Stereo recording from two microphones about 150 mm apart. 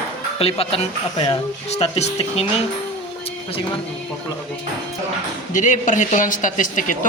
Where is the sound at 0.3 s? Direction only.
40° left (ahead or behind).